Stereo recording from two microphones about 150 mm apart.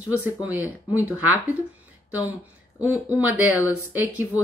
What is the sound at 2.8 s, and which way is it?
A woman's voice, 10° right (ahead or behind).